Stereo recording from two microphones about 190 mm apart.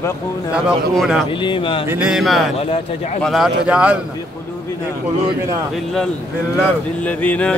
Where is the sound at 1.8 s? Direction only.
5° right (ahead or behind).